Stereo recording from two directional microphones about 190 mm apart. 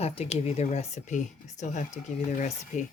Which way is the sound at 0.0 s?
30° left (ahead or behind).